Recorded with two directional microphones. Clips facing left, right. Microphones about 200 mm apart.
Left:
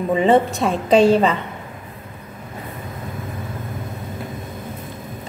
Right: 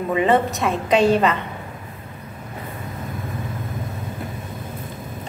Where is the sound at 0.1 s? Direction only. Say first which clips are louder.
Left 3 dB; 30° left (ahead or behind).